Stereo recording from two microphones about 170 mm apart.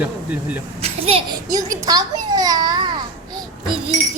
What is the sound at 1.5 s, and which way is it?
A child's voice, 20° right (ahead or behind).